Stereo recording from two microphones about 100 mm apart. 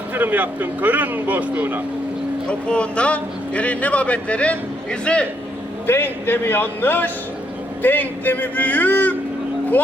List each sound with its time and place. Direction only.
0.1 s speech: 20° right (ahead or behind)
2.5 s speech: 10° left (ahead or behind)
5.8 s a man's voice: 20° left (ahead or behind)